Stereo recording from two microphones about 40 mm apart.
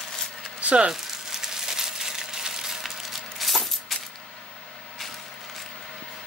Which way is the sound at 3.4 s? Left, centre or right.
Centre.